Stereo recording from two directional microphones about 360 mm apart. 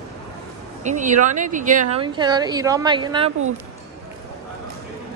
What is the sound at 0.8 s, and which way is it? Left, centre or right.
A woman's voice, centre.